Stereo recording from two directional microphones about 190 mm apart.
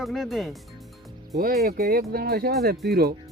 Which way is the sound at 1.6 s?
55° right (ahead or behind).